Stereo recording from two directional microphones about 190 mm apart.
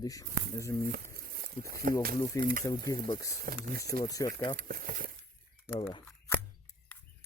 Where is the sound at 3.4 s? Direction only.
50° right (ahead or behind).